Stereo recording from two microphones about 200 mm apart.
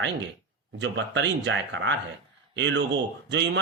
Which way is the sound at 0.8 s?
65° right (ahead or behind).